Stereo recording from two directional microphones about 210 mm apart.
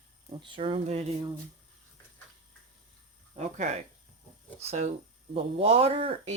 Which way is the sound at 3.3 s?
30° right (ahead or behind).